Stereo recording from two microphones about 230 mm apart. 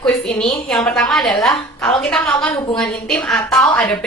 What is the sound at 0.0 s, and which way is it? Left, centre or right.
A woman's voice, centre.